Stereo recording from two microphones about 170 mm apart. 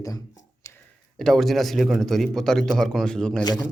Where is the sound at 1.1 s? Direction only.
5° left (ahead or behind).